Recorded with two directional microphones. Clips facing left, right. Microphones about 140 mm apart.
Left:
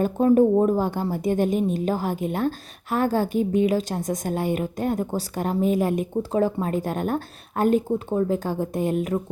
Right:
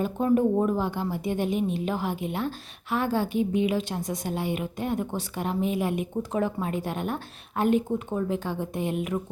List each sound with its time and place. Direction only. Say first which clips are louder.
0.0 s a woman's voice: left 5 dB; 40° left (ahead or behind)